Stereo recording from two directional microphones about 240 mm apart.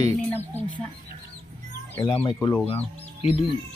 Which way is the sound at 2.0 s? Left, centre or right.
Centre.